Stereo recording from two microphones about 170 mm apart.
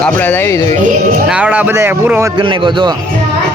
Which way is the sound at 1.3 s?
5° right (ahead or behind).